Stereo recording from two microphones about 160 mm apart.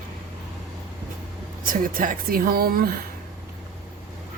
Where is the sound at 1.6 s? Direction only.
60° right (ahead or behind).